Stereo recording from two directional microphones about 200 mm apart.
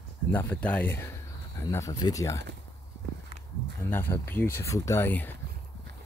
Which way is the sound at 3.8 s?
10° left (ahead or behind).